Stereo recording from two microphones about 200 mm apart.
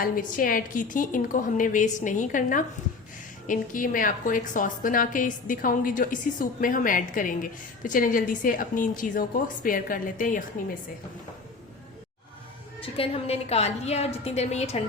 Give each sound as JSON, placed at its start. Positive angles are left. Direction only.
{"t": 0.0, "sound": "a woman's voice", "side_deg": 45}
{"t": 12.8, "sound": "a woman's voice", "side_deg": 30}